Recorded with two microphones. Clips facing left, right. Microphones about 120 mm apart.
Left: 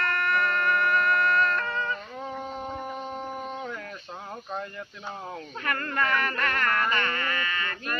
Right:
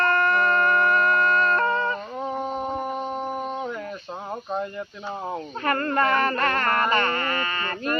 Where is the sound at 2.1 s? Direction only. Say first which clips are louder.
Right 7 dB; 20° right (ahead or behind).